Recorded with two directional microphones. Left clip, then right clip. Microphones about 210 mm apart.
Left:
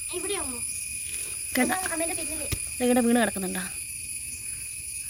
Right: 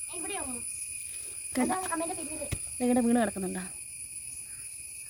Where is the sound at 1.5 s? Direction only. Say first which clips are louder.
Left 4 dB; 10° right (ahead or behind).